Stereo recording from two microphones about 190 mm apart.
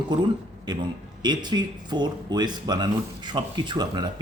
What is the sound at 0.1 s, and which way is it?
Speech, 20° right (ahead or behind).